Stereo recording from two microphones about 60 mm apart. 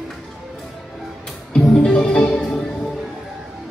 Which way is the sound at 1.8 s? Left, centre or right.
Centre.